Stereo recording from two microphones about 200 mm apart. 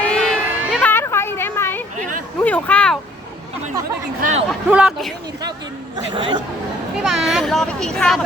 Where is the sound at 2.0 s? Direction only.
40° right (ahead or behind).